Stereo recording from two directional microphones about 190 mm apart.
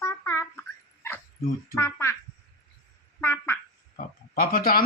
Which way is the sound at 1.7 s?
15° left (ahead or behind).